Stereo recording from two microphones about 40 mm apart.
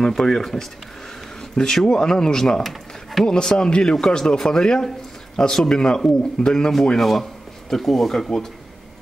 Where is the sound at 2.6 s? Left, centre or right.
Centre.